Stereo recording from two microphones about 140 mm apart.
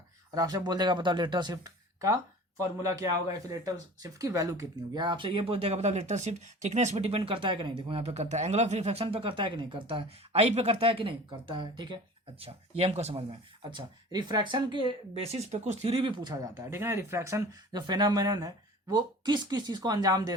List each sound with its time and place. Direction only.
0.3 s speech: 30° right (ahead or behind)
4.9 s speech: 35° right (ahead or behind); by 7.2 s 50° right (ahead or behind)
7.3 s speech: 40° right (ahead or behind)
12.4 s speech: 45° right (ahead or behind)
13.7 s speech: 30° right (ahead or behind)